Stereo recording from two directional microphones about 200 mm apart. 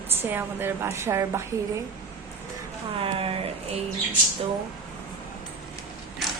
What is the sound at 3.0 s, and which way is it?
Speech, 30° right (ahead or behind).